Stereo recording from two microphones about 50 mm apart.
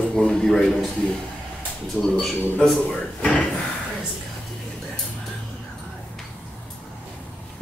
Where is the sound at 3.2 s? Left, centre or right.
Centre.